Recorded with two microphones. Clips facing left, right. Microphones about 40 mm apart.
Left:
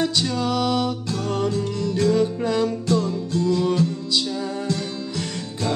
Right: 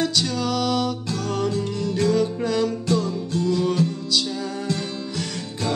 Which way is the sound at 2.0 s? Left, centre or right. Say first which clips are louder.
Left 1 dB; centre.